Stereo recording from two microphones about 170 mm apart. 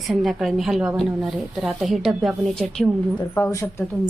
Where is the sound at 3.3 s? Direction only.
15° left (ahead or behind).